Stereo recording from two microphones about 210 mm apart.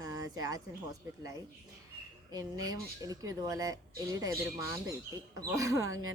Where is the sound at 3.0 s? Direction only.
15° right (ahead or behind).